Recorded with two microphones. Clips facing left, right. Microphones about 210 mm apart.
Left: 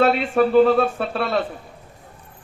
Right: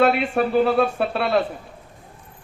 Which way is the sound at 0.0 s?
40° left (ahead or behind).